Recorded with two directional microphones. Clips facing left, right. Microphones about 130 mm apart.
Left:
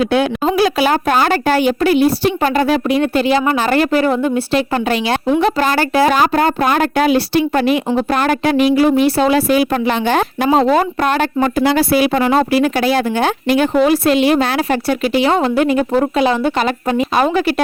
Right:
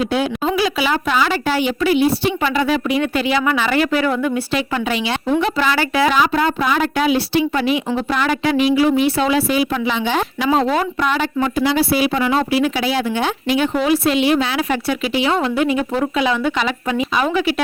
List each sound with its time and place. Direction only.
0.0 s a woman's voice: 70° left (ahead or behind)
0.4 s speech: 45° left (ahead or behind); by 4.6 s 30° left (ahead or behind)
4.7 s speech: 45° left (ahead or behind)
9.0 s speech: 40° left (ahead or behind)